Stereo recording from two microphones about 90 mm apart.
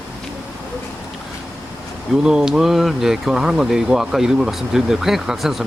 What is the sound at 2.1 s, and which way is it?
Speech, 5° right (ahead or behind).